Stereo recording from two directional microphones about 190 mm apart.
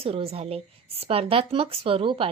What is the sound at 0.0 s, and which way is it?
A woman's voice, 30° right (ahead or behind).